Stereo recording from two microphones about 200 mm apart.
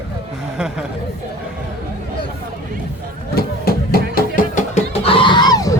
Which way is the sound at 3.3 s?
50° left (ahead or behind).